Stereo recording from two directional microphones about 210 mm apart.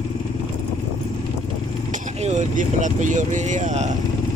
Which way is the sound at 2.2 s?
35° right (ahead or behind).